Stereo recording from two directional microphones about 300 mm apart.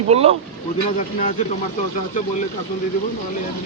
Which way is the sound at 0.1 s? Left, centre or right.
Centre.